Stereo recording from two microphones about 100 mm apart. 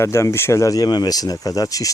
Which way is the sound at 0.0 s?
30° left (ahead or behind).